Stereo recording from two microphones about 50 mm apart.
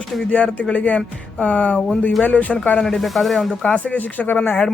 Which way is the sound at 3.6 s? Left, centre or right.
Left.